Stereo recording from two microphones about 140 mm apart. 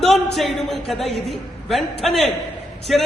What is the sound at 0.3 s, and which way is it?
A woman's voice, centre (ahead or behind).